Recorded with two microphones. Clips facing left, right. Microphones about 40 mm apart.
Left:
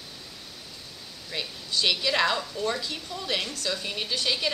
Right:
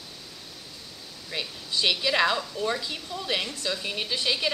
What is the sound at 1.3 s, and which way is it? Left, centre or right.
A woman's voice, centre.